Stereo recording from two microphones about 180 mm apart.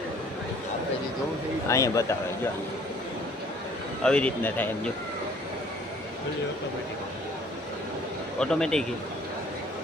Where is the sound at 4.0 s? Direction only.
5° left (ahead or behind).